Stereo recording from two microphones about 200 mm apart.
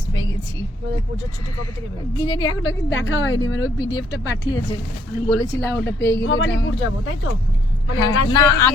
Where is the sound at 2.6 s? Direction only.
70° left (ahead or behind).